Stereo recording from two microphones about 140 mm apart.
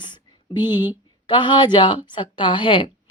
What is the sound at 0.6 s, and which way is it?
Speech, 15° right (ahead or behind).